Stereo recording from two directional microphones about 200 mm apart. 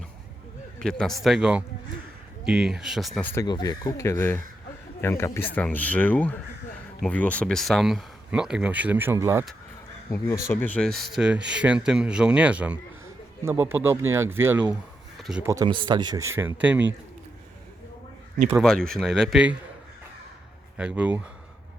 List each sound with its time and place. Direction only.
0.8 s speech: centre (ahead or behind)
3.2 s speech: 10° left (ahead or behind)
3.4 s speech: 20° left (ahead or behind); by 9.5 s 15° right (ahead or behind)
10.1 s a man's voice: 15° left (ahead or behind); by 15.4 s 5° right (ahead or behind)
15.4 s a man's voice: 20° right (ahead or behind)
18.6 s speech: 5° left (ahead or behind)
20.7 s speech: 5° right (ahead or behind)